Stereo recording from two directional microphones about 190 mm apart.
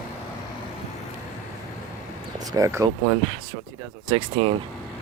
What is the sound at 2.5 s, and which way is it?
Speech, 15° right (ahead or behind).